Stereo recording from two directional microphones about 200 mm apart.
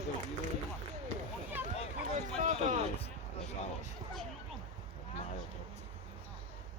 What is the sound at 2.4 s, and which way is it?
Speech, 35° right (ahead or behind).